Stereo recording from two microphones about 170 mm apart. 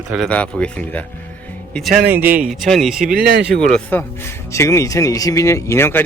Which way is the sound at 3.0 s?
65° right (ahead or behind).